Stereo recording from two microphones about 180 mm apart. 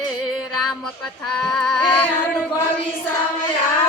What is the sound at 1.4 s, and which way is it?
Speech, 5° left (ahead or behind).